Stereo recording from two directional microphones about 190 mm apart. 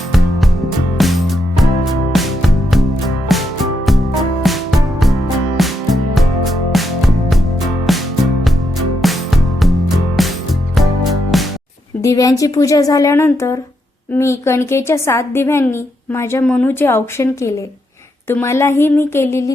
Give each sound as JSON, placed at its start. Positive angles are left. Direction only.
{"t": 0.1, "sound": "music", "side_deg": 0}
{"t": 12.0, "sound": "a woman's voice", "side_deg": 20}